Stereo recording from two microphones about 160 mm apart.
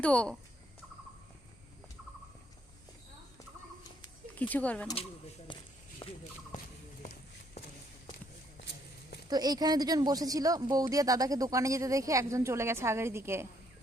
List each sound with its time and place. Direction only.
0.0 s speech: 5° left (ahead or behind)
4.4 s speech: 10° left (ahead or behind)
5.5 s walk: 30° left (ahead or behind)
6.0 s a sound: 35° left (ahead or behind)
6.5 s a sound: 50° left (ahead or behind)
7.0 s run: 45° left (ahead or behind)
9.3 s speech: 25° right (ahead or behind)